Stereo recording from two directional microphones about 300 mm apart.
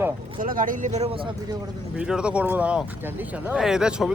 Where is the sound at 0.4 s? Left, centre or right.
Right.